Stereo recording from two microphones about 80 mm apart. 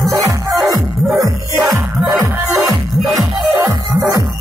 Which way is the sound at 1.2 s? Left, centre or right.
Right.